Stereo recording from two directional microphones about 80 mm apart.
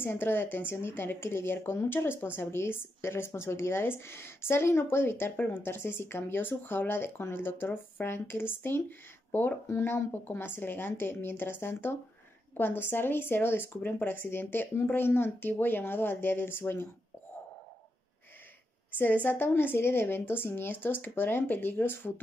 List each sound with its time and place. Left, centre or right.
0.0 s speech: left
18.9 s speech: left